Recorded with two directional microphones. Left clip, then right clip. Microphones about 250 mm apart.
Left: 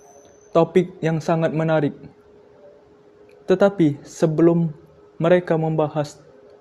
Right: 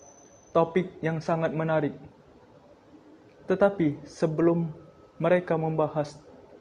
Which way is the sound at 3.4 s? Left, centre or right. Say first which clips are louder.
Left 7 dB; left.